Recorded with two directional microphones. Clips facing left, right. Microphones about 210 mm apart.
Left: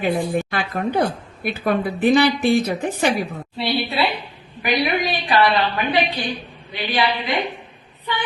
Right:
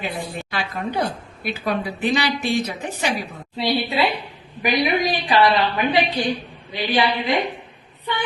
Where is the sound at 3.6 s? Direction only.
15° right (ahead or behind).